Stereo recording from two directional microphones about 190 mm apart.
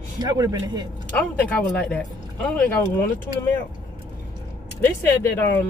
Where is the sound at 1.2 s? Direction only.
10° left (ahead or behind).